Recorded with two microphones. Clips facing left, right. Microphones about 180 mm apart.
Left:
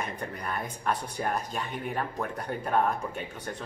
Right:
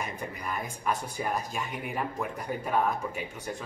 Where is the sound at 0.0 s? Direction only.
10° right (ahead or behind).